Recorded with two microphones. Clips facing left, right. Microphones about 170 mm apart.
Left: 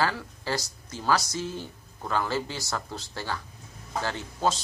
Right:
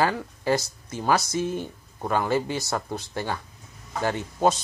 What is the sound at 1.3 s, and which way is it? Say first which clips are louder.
Speech: right 6 dB; 55° right (ahead or behind).